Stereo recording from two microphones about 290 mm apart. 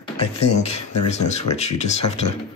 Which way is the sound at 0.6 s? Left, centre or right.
Left.